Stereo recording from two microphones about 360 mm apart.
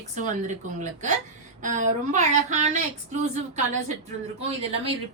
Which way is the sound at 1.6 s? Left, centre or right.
Right.